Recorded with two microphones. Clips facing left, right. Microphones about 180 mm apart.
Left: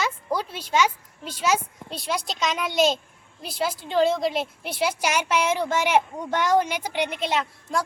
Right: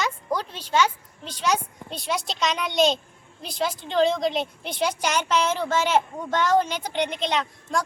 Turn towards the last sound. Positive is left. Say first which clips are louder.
# even
turn(degrees=5)  # may be behind; listen again after turning